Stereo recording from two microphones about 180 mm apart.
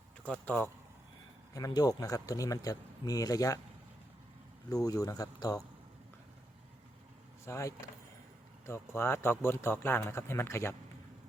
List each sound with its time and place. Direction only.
0.3 s speech: 10° left (ahead or behind)
1.5 s speech: 20° left (ahead or behind)
4.7 s speech: 20° left (ahead or behind)
7.4 s speech: 15° left (ahead or behind)